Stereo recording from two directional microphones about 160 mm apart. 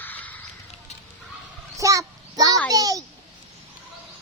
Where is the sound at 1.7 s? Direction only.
20° right (ahead or behind).